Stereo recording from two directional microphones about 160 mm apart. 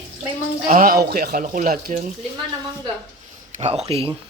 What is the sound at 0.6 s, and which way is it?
Speech, 60° right (ahead or behind).